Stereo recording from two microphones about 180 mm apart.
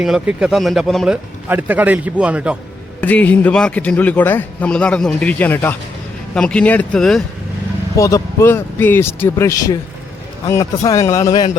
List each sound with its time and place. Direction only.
0.0 s speech: 5° right (ahead or behind)
3.0 s a man's voice: 10° left (ahead or behind)
7.9 s a man's voice: 15° left (ahead or behind)